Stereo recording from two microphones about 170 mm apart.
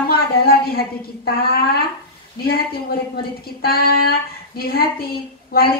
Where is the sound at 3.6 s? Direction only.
65° left (ahead or behind).